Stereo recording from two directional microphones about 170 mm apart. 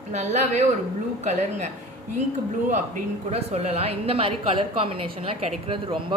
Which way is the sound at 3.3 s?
35° right (ahead or behind).